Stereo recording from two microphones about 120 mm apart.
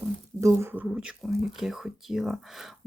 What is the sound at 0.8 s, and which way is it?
Speech, 5° right (ahead or behind).